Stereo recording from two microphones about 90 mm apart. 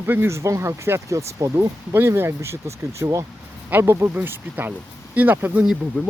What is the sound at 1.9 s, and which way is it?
Speech, 25° right (ahead or behind).